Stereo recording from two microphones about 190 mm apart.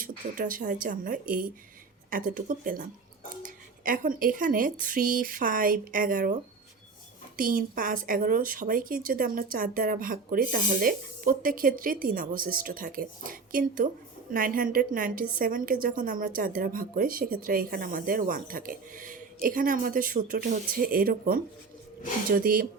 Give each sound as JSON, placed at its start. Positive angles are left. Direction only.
{"t": 0.0, "sound": "a woman's voice", "side_deg": -45}